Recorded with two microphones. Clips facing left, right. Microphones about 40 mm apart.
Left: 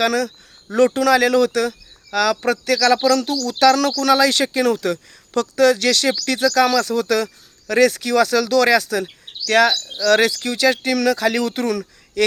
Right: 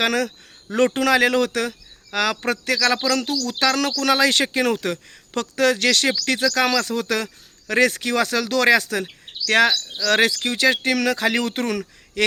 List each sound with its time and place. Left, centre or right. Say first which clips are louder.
0.0 s speech: left 2 dB; right
2.7 s speech: left 6 dB; centre